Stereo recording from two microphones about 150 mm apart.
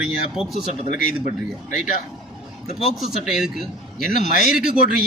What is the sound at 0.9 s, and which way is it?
Speech, 70° left (ahead or behind).